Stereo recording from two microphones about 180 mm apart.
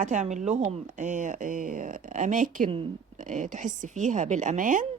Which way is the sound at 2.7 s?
30° right (ahead or behind).